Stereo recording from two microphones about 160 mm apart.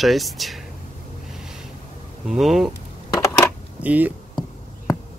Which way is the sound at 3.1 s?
20° left (ahead or behind).